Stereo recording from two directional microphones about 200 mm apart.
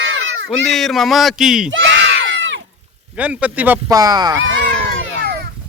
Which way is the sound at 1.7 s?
70° right (ahead or behind).